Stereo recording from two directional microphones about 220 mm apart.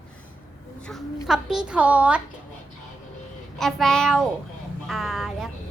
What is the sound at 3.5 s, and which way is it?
A child's voice, centre (ahead or behind).